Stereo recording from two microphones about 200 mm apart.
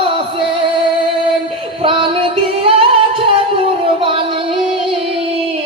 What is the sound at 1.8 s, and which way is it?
Music, 25° right (ahead or behind).